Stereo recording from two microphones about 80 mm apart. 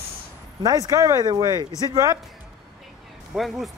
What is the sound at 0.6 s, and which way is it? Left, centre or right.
Speech, right.